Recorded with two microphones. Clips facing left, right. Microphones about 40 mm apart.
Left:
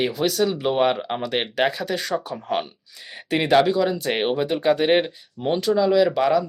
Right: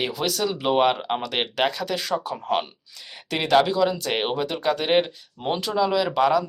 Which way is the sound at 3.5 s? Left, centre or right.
Centre.